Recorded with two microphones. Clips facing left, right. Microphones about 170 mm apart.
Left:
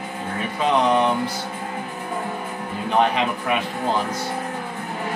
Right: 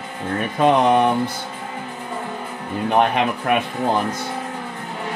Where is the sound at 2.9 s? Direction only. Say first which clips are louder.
Right 2 dB; 55° right (ahead or behind).